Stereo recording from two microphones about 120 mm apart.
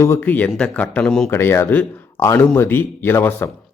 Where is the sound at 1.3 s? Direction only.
20° left (ahead or behind).